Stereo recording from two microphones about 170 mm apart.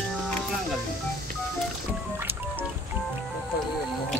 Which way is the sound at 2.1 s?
15° right (ahead or behind).